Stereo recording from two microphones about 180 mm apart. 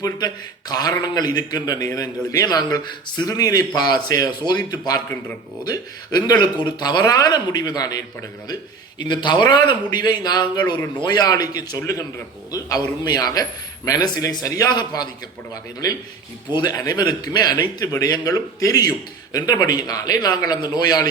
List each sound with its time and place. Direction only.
0.7 s a man's voice: 20° left (ahead or behind)
9.0 s a man's voice: 25° left (ahead or behind)
16.5 s a man's voice: 25° left (ahead or behind)